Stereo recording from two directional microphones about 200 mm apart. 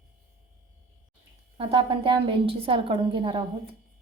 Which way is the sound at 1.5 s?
25° right (ahead or behind).